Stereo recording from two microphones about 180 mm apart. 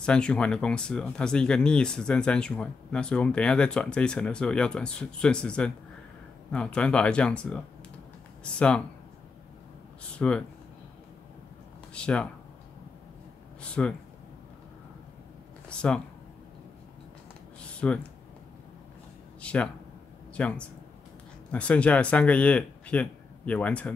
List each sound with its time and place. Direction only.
0.0 s speech: 5° left (ahead or behind)
10.1 s speech: 5° left (ahead or behind)
11.9 s speech: 5° left (ahead or behind)
13.6 s speech: 5° left (ahead or behind)
17.7 s speech: 5° left (ahead or behind)
19.4 s speech: 5° left (ahead or behind)